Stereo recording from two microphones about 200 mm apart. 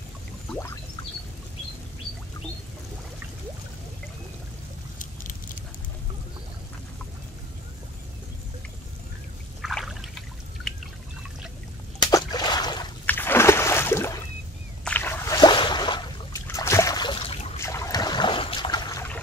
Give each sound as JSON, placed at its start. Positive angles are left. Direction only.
{"t": 4.9, "sound": "patter", "side_deg": 40}
{"t": 9.6, "sound": "trickle", "side_deg": 0}
{"t": 12.0, "sound": "a sound", "side_deg": 20}
{"t": 13.0, "sound": "a sound", "side_deg": 10}
{"t": 16.4, "sound": "boat", "side_deg": 15}
{"t": 17.6, "sound": "trickle", "side_deg": 15}